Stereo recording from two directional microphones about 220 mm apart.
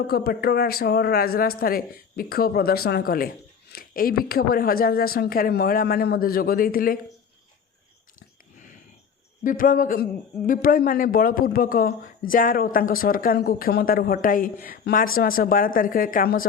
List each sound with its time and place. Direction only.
0.1 s speech: 45° left (ahead or behind)
9.4 s a man's voice: 40° left (ahead or behind)